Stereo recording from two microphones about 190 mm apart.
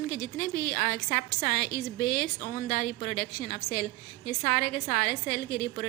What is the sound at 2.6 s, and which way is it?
A woman's voice, 45° left (ahead or behind).